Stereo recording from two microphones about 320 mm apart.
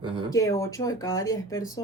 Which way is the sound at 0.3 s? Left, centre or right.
Centre.